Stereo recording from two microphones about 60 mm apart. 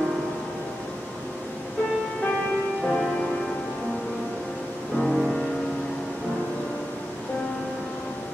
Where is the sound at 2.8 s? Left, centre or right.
Centre.